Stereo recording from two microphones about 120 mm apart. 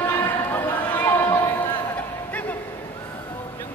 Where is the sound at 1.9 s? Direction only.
15° left (ahead or behind).